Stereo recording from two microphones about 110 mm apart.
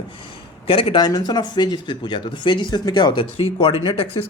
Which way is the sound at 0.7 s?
55° left (ahead or behind).